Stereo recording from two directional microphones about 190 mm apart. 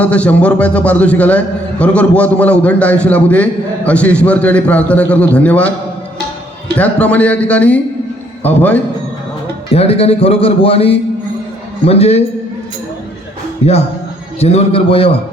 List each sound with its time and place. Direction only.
0.0 s a man's voice: 5° left (ahead or behind)
6.7 s a man's voice: 5° left (ahead or behind)
9.7 s a man's voice: 30° left (ahead or behind)
13.6 s a man's voice: 35° left (ahead or behind)